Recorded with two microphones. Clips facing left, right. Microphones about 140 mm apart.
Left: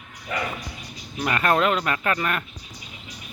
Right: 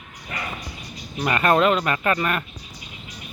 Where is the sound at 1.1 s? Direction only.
5° right (ahead or behind).